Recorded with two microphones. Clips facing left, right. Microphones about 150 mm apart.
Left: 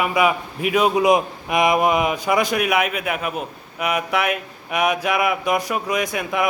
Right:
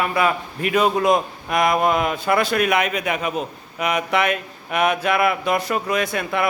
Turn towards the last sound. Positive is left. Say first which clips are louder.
# even
turn(degrees=15)  # may be behind; listen again after turning